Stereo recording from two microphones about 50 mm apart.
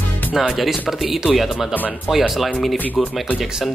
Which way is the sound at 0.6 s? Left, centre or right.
Centre.